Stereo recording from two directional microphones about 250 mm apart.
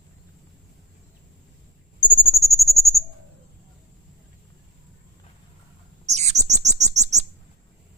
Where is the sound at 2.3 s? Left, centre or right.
Centre.